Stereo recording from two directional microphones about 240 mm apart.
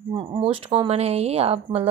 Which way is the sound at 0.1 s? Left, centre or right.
Right.